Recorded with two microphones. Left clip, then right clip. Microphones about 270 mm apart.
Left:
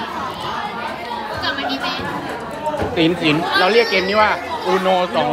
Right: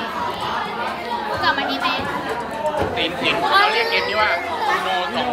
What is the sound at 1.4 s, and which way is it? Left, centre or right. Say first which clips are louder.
Children playing: right 2 dB; right.